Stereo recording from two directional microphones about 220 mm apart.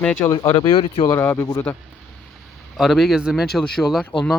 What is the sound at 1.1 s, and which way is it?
Speech, 10° left (ahead or behind).